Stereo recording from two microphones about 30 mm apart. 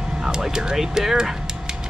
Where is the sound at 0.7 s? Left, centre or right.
Centre.